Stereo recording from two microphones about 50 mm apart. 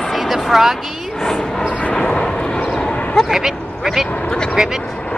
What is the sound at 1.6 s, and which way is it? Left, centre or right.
Vehicle, left.